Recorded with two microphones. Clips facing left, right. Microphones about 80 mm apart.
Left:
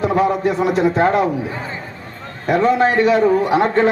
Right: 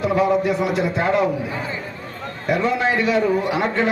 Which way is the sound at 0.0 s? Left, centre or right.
Left.